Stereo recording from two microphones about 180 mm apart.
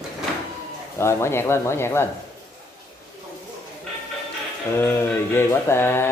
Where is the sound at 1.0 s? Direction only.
15° left (ahead or behind).